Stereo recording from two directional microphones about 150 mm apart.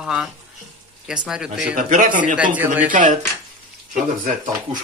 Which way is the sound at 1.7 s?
60° right (ahead or behind).